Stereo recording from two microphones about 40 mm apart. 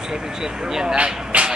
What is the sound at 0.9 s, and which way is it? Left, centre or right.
Vehicle, right.